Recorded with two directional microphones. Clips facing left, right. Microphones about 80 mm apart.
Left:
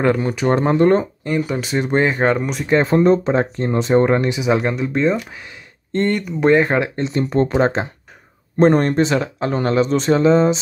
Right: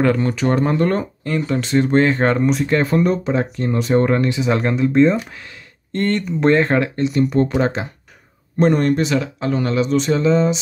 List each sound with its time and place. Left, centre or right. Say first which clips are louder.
0.0 s speech: even; centre
2.2 s speech: right 2 dB; centre
2.7 s speech: left 8 dB; left
4.5 s speech: left 1 dB; centre
7.0 s speech: right 1 dB; left